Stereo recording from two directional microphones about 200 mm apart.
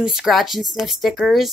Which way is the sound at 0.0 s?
Centre (ahead or behind).